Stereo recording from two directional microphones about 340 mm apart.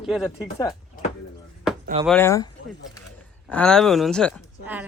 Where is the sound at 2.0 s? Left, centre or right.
Centre.